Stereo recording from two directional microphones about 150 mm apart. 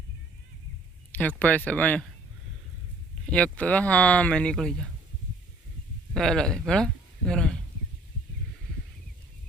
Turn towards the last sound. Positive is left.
turn(degrees=5)  # may be behind; listen again after turning